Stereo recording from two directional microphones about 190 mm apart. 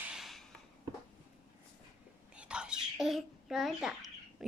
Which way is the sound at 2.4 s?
5° right (ahead or behind).